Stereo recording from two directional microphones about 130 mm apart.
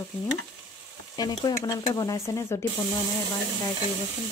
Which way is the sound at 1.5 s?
30° left (ahead or behind).